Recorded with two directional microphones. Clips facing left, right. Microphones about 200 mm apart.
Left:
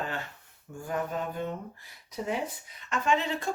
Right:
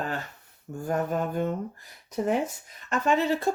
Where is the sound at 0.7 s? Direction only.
45° right (ahead or behind).